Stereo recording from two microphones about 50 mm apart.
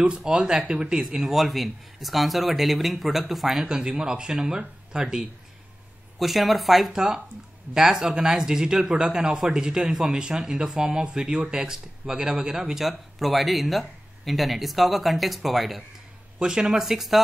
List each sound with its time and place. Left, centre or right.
0.1 s speech: centre
6.1 s speech: centre
16.3 s speech: centre